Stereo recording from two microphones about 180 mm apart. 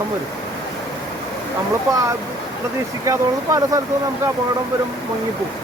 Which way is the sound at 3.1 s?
20° right (ahead or behind).